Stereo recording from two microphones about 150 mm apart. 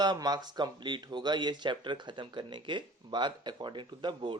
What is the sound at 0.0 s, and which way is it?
Speech, 25° right (ahead or behind).